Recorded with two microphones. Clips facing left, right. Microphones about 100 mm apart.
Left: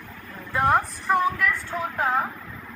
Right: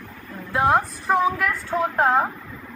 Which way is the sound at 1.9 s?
55° right (ahead or behind).